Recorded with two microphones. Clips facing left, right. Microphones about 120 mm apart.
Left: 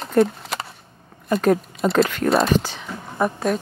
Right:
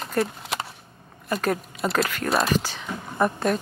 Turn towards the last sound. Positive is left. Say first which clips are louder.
# left 1 dB
turn(degrees=0)  # may be behind; listen again after turning